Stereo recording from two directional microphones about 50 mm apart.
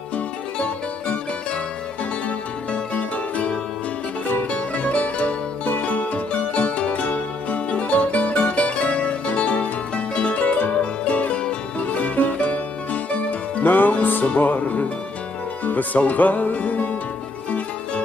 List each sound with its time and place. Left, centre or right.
0.6 s music: left